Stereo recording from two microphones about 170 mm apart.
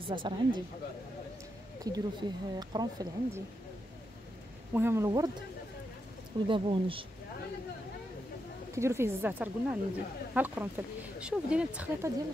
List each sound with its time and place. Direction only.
0.1 s speech: 30° right (ahead or behind)
1.9 s speech: 25° right (ahead or behind)
4.7 s speech: 15° right (ahead or behind)
6.4 s speech: 30° right (ahead or behind)
8.7 s speech: 15° right (ahead or behind)